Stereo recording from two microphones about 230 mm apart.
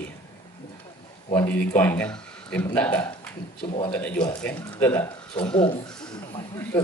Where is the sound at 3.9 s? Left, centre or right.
Centre.